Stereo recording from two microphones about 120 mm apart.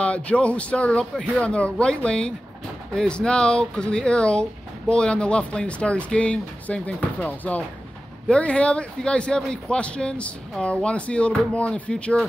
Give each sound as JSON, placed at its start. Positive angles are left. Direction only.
{"t": 0.0, "sound": "speech", "side_deg": 10}